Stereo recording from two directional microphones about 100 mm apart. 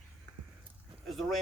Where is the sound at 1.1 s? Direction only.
Centre (ahead or behind).